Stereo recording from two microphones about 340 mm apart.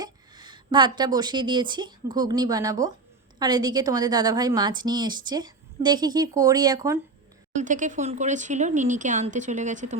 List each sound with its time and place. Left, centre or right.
0.0 s a woman's voice: centre
7.5 s speech: right